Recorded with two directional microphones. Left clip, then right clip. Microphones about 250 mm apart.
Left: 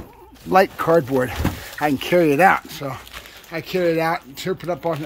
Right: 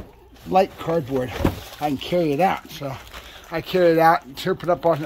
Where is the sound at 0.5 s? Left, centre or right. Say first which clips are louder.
Left 4 dB; left.